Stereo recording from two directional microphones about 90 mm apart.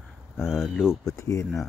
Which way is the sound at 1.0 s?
35° left (ahead or behind).